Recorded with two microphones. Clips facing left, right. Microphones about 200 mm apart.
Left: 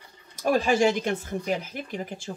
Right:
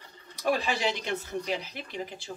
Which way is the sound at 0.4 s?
45° left (ahead or behind).